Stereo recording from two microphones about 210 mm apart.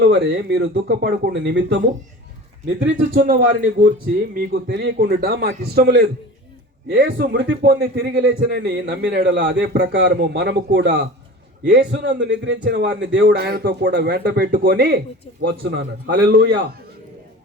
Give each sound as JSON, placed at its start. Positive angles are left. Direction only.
{"t": 0.0, "sound": "a man's voice", "side_deg": -50}
{"t": 2.8, "sound": "a man's voice", "side_deg": -40}
{"t": 4.4, "sound": "a man's voice", "side_deg": -50}
{"t": 7.9, "sound": "speech", "side_deg": -60}
{"t": 8.4, "sound": "a man's voice", "side_deg": -45}
{"t": 8.7, "sound": "a man's voice", "side_deg": -55}